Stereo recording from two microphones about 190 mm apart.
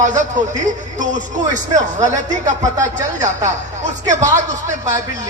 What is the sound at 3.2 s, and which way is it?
A man's voice, 40° right (ahead or behind).